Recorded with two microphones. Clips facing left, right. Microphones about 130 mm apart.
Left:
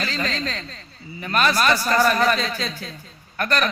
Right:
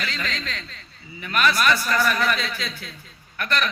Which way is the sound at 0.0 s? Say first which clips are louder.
Left 4 dB; 35° left (ahead or behind).